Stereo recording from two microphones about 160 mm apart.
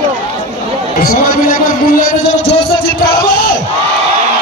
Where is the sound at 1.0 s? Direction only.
65° left (ahead or behind).